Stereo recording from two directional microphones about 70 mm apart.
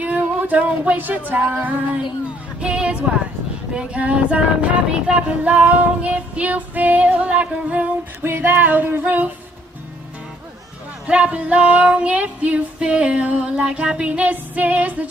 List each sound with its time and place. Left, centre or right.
0.0 s a sound: right
1.3 s child singing: right
2.6 s speech: centre
3.7 s child singing: centre
8.2 s child singing: right
11.1 s female singing: centre